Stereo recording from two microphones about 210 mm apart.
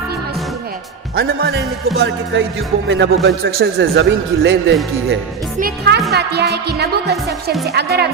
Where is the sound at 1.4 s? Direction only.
50° right (ahead or behind).